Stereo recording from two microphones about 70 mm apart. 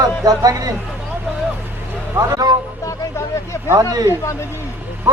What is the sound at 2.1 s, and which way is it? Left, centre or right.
Speech, right.